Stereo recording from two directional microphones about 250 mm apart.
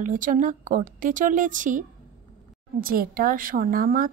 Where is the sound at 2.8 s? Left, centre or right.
Right.